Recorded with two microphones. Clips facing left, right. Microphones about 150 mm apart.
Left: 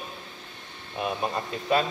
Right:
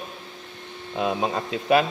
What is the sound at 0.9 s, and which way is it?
Speech, 90° right.